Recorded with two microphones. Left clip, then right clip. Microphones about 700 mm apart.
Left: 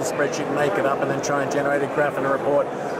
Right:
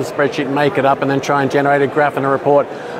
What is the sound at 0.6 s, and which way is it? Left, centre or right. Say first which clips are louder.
Speech: right 7 dB; right.